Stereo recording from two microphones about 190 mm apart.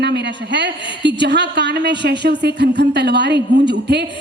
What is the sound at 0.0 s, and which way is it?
A woman's voice, 65° right (ahead or behind).